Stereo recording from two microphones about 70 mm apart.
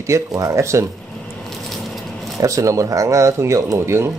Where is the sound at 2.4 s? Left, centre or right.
Right.